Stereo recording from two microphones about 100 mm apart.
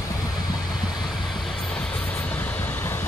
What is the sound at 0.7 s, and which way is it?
Vehicle, 5° right (ahead or behind).